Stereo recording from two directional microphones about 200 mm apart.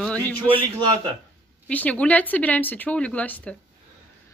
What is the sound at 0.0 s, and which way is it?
Speech, 5° left (ahead or behind).